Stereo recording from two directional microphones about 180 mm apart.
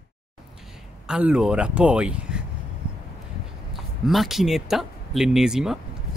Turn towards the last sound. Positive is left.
turn(degrees=-5)  # may be behind; listen again after turning